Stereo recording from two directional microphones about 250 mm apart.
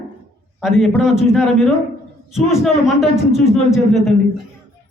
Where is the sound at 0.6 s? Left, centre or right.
Centre.